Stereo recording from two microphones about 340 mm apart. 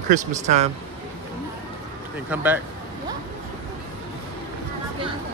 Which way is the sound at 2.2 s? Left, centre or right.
Centre.